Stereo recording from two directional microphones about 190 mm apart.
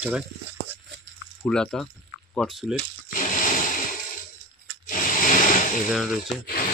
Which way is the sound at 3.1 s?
45° left (ahead or behind).